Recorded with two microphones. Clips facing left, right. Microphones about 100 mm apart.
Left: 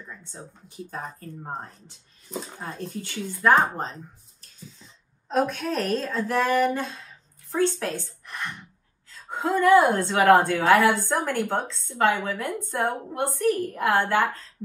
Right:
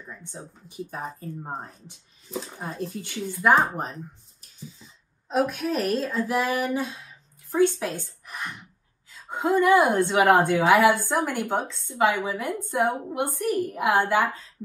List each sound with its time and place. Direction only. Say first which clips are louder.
0.0 s a woman's voice: right 1 dB; 10° right (ahead or behind)
2.6 s a woman's voice: right 1 dB; 15° right (ahead or behind)
8.3 s a sound: left 1 dB; 10° right (ahead or behind)
9.1 s a woman's voice: right 2 dB; 15° right (ahead or behind)